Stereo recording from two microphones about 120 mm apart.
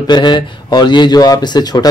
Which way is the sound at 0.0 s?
40° left (ahead or behind).